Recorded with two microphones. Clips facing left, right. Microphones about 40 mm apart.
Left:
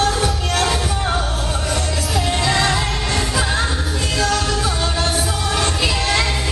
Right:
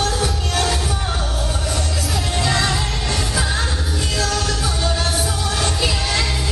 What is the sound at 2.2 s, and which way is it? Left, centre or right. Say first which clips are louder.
Music: left 2 dB; centre.